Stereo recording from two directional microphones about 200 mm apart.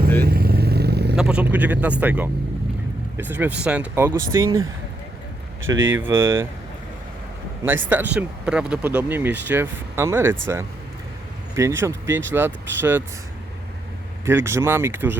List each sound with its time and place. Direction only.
0.2 s vehicle: 50° right (ahead or behind)
1.1 s speech: 5° right (ahead or behind)
5.6 s speech: 75° right (ahead or behind)
6.0 s speech: 15° right (ahead or behind)
7.9 s speech: 5° right (ahead or behind)
11.8 s speech: 10° right (ahead or behind)
14.3 s speech: 10° right (ahead or behind)